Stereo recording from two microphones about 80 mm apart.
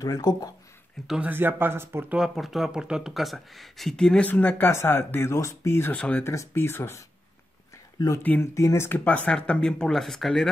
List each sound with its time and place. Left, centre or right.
0.0 s speech: left
1.2 s speech: right
2.0 s speech: centre
4.3 s speech: left
5.9 s speech: centre
6.2 s speech: left
8.2 s speech: left
8.5 s speech: left
8.8 s speech: left; by 10.5 s centre